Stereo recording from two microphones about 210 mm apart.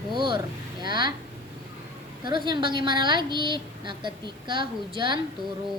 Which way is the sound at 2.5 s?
20° right (ahead or behind).